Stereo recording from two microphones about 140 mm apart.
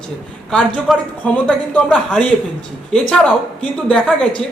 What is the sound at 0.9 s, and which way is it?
A man's voice, centre (ahead or behind).